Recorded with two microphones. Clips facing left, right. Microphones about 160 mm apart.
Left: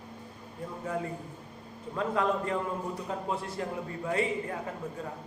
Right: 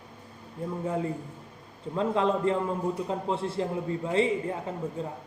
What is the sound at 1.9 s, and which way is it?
A man's voice, 25° right (ahead or behind).